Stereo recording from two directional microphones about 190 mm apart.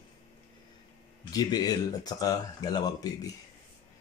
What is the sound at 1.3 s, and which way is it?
Speech, 20° left (ahead or behind).